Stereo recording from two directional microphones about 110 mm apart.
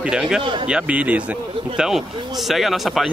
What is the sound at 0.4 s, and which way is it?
Speech, 50° right (ahead or behind).